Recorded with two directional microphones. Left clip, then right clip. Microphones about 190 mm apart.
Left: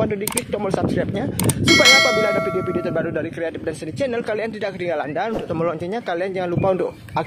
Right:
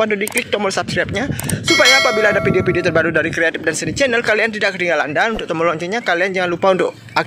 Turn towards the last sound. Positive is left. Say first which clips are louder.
# right 5 dB
turn(degrees=-5)  # may be behind; listen again after turning